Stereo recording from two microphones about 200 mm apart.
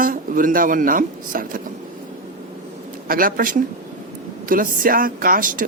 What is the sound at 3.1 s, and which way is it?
Speech, 45° right (ahead or behind).